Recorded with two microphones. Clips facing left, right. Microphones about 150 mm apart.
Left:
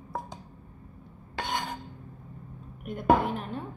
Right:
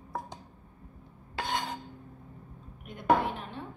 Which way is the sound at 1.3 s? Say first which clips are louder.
Left 1 dB; centre (ahead or behind).